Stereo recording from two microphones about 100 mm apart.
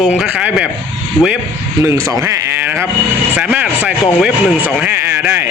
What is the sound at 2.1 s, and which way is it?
Speech, 35° right (ahead or behind).